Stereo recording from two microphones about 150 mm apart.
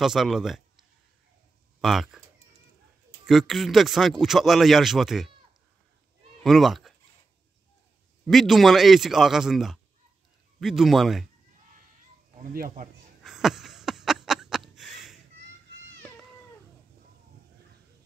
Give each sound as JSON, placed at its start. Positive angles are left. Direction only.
{"t": 0.0, "sound": "a man's voice", "side_deg": 0}
{"t": 3.3, "sound": "speech", "side_deg": 0}
{"t": 6.4, "sound": "speech", "side_deg": 0}
{"t": 8.3, "sound": "speech", "side_deg": 0}
{"t": 12.4, "sound": "speech", "side_deg": -65}
{"t": 13.2, "sound": "a sound", "side_deg": 0}